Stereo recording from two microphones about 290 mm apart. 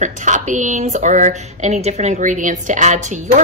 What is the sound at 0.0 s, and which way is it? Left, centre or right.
Speech, right.